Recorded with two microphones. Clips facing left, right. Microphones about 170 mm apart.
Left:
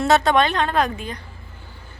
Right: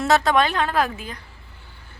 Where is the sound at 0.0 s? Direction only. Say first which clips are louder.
Left 2 dB; centre (ahead or behind).